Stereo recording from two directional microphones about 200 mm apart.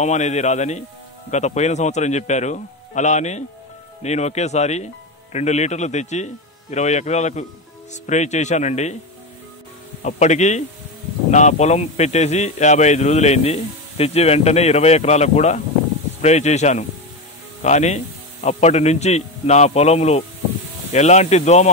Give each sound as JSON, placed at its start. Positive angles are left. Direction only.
{"t": 0.0, "sound": "speech", "side_deg": 35}
{"t": 10.0, "sound": "speech", "side_deg": 35}